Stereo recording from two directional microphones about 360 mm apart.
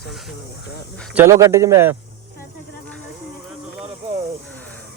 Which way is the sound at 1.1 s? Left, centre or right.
Centre.